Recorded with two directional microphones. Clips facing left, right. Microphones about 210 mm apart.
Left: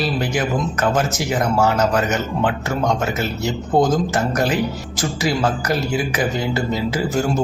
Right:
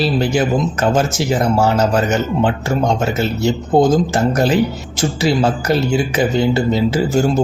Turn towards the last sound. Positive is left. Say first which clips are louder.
# right 5 dB
turn(degrees=-25)  # may be behind; listen again after turning